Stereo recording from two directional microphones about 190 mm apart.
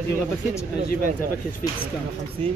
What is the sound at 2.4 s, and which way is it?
Speech, 35° right (ahead or behind).